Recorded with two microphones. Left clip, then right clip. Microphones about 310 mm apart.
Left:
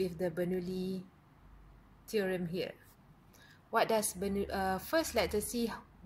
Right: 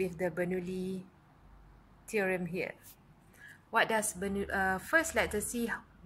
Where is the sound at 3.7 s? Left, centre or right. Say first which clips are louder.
Right 1 dB; centre.